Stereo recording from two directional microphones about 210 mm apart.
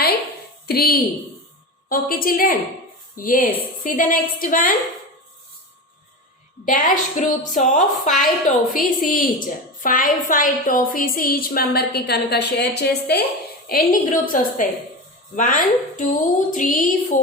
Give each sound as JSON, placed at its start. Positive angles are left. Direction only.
{"t": 0.7, "sound": "a woman's voice", "side_deg": 45}
{"t": 6.7, "sound": "a woman's voice", "side_deg": 40}